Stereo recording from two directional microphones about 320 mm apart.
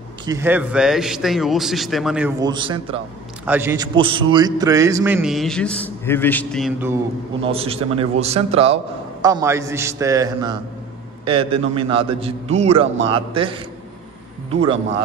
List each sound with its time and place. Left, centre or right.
0.2 s a man's voice: centre
7.4 s a man's voice: centre